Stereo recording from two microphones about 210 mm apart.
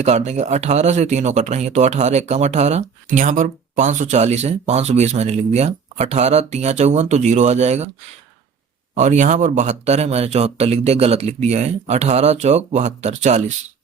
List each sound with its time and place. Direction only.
0.0 s speech: 30° right (ahead or behind)
9.0 s speech: 35° right (ahead or behind)